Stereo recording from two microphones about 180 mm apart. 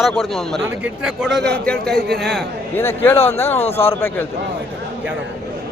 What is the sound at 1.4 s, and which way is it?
Speech, 65° right (ahead or behind).